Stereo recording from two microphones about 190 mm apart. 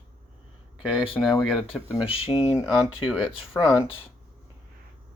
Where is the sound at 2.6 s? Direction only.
Centre (ahead or behind).